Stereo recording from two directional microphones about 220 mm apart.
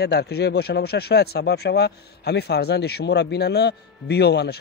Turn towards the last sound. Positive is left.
turn(degrees=50)  # may be behind; listen again after turning